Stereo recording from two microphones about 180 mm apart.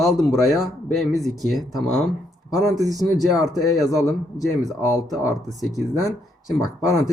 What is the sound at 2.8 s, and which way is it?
Speech, 20° right (ahead or behind).